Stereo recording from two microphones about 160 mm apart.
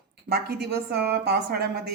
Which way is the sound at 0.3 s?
85° right.